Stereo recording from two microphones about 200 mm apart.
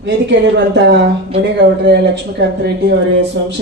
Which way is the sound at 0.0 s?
60° right (ahead or behind).